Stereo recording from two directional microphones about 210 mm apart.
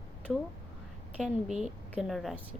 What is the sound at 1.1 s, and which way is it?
Speech, centre (ahead or behind).